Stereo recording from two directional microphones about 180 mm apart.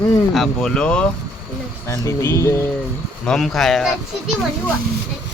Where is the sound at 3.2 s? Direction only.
Centre (ahead or behind).